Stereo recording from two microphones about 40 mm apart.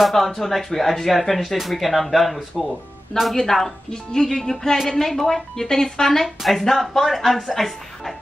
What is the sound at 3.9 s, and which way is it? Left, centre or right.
Speech, centre.